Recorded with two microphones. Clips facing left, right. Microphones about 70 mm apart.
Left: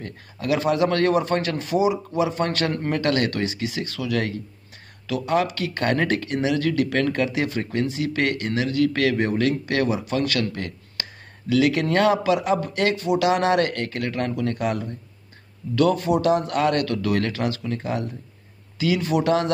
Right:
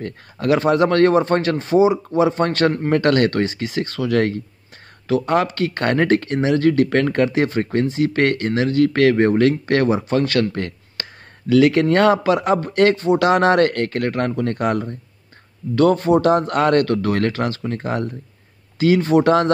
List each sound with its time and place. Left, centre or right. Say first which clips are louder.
0.0 s speech: right 7 dB; right